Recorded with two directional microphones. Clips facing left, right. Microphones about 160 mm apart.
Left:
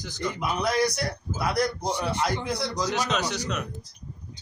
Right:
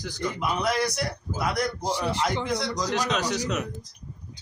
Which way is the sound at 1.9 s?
90° right.